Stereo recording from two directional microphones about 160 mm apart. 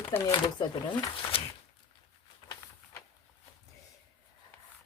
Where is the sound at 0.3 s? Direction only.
25° left (ahead or behind).